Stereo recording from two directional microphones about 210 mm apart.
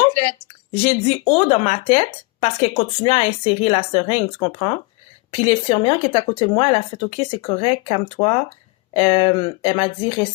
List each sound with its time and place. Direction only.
0.7 s speech: 30° left (ahead or behind)